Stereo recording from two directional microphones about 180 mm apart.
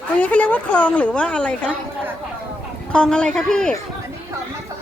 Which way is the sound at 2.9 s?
5° left (ahead or behind).